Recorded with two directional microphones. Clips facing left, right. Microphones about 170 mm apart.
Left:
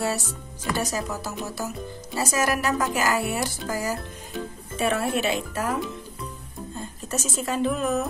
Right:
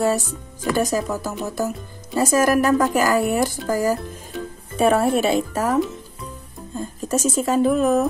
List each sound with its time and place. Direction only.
0.7 s speech: 45° right (ahead or behind)
7.0 s speech: 45° right (ahead or behind)